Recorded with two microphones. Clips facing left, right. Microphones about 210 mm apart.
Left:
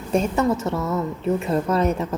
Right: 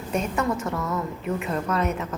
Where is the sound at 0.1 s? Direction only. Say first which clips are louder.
Left 5 dB; 25° left (ahead or behind).